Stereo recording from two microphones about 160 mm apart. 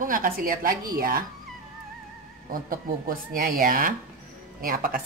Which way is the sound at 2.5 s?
60° right (ahead or behind).